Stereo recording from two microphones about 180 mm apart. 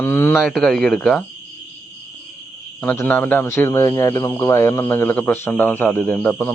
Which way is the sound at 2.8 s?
10° left (ahead or behind).